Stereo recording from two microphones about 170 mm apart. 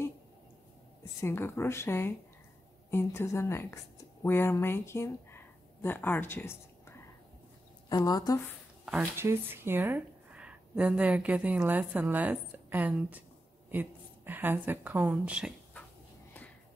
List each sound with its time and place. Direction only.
1.2 s a woman's voice: 15° left (ahead or behind)
7.9 s a woman's voice: 20° left (ahead or behind)
8.8 s a woman's voice: 10° right (ahead or behind)